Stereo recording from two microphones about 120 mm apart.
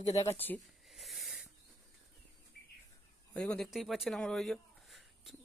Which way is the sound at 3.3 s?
5° left (ahead or behind).